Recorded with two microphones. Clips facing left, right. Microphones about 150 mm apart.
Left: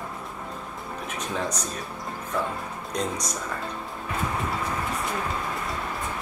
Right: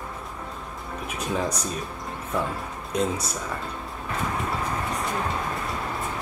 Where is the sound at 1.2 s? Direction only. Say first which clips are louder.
Right 3 dB; 10° right (ahead or behind).